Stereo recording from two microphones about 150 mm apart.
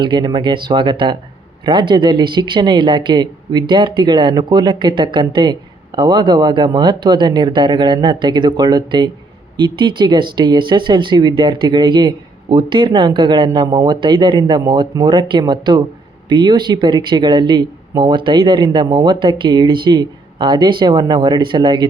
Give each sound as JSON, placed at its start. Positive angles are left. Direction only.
{"t": 0.0, "sound": "speech", "side_deg": -30}